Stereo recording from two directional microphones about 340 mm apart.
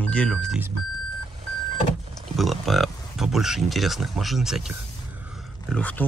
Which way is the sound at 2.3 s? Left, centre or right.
Centre.